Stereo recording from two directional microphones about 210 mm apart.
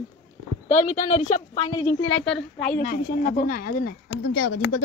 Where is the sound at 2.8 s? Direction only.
40° left (ahead or behind).